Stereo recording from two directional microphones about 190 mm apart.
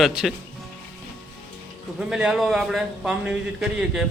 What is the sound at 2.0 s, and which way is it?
A man's voice, 5° right (ahead or behind).